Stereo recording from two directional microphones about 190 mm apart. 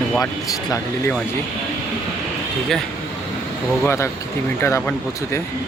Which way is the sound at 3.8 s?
15° left (ahead or behind).